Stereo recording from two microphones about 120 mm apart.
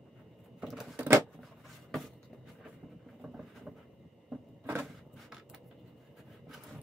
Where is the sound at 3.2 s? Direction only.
Centre (ahead or behind).